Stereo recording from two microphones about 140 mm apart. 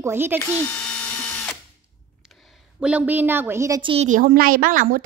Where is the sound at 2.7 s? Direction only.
10° right (ahead or behind).